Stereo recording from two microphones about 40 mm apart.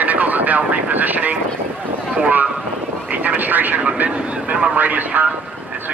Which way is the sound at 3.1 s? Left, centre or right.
Right.